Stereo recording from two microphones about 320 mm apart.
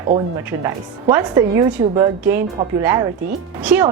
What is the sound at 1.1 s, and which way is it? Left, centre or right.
Speech, centre.